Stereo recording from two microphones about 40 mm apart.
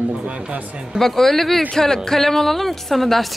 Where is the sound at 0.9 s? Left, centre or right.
Centre.